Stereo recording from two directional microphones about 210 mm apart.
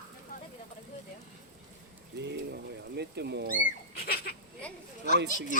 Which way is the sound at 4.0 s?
45° left (ahead or behind).